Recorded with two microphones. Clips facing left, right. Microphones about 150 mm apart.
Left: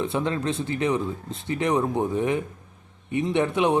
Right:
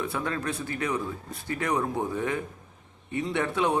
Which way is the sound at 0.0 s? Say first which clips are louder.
Left 5 dB; 25° left (ahead or behind).